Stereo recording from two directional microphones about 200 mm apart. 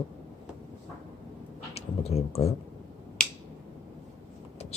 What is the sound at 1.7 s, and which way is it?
Speech, 30° left (ahead or behind).